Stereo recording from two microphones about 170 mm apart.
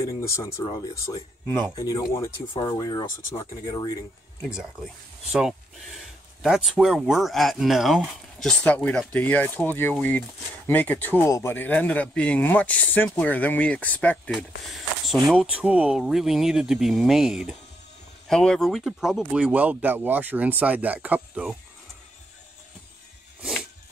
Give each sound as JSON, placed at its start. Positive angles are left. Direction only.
{"t": 0.0, "sound": "speech", "side_deg": 15}
{"t": 5.3, "sound": "speech", "side_deg": 0}
{"t": 15.2, "sound": "speech", "side_deg": -5}
{"t": 23.4, "sound": "music", "side_deg": -5}